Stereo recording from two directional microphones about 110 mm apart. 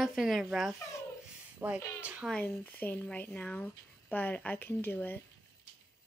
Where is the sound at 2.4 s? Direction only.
15° left (ahead or behind).